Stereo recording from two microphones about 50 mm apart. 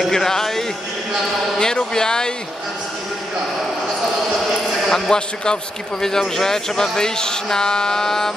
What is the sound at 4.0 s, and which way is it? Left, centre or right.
A man's voice, centre.